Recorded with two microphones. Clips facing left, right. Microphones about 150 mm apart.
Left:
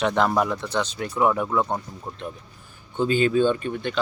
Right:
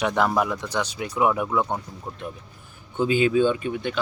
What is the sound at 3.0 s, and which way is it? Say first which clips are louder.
Speech: even; 10° right (ahead or behind).